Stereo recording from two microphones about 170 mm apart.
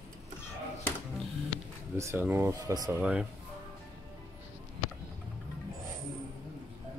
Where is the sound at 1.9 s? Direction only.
15° right (ahead or behind).